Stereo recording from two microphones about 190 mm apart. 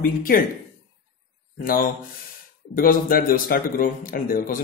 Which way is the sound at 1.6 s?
45° left (ahead or behind).